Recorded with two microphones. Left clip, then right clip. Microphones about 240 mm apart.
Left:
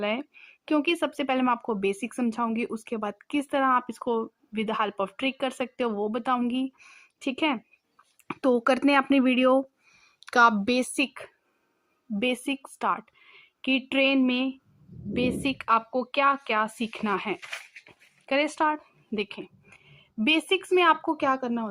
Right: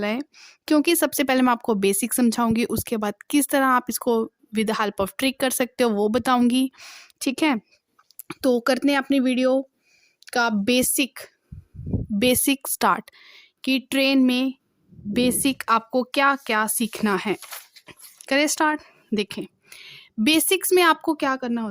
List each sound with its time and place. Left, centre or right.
0.0 s speech: right
7.2 s speech: right
8.3 s speech: right
10.2 s a woman's voice: right
10.7 s a woman's voice: right